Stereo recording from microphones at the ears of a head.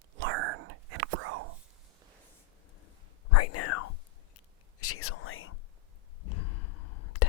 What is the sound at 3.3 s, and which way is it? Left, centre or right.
Whispering, left.